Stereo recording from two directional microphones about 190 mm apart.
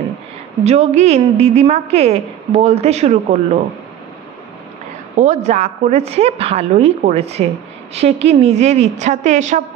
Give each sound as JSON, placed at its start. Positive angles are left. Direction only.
{"t": 0.7, "sound": "a woman's voice", "side_deg": -35}
{"t": 5.1, "sound": "a woman's voice", "side_deg": -40}